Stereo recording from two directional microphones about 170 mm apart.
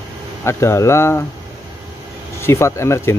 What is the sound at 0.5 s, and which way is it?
Speech, 15° left (ahead or behind).